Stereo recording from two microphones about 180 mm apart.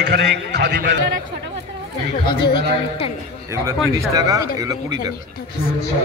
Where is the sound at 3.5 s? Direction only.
15° right (ahead or behind).